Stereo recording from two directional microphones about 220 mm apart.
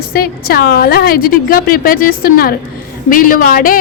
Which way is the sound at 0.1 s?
45° left (ahead or behind).